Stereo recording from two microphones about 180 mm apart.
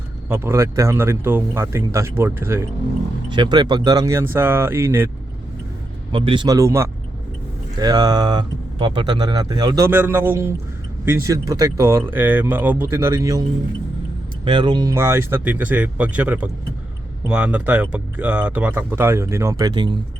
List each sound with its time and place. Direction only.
0.3 s speech: 15° right (ahead or behind)
3.2 s speech: 25° right (ahead or behind)
6.1 s speech: 30° right (ahead or behind)
14.4 s speech: 25° right (ahead or behind)